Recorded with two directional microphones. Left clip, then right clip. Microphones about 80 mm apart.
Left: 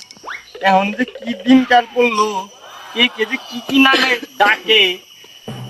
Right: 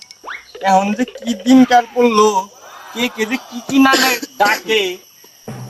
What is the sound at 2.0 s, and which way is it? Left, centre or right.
Speech, right.